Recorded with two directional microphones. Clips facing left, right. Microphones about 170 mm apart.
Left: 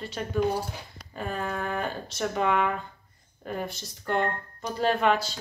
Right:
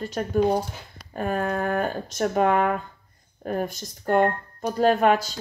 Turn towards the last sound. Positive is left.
turn(degrees=-45)  # may be behind; listen again after turning